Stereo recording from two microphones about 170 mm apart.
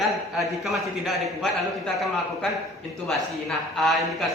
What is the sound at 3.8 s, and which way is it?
Speech, centre (ahead or behind).